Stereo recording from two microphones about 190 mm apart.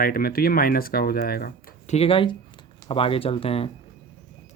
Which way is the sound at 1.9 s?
30° left (ahead or behind).